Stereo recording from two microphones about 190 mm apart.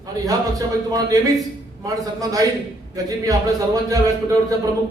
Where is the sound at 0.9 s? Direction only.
20° right (ahead or behind).